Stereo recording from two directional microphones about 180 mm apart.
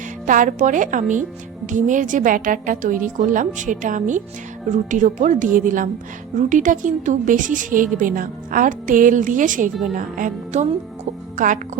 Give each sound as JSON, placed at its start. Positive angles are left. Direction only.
{"t": 0.3, "sound": "a woman's voice", "side_deg": -45}